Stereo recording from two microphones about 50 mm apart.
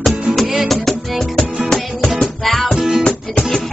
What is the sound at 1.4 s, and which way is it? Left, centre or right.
Music, centre.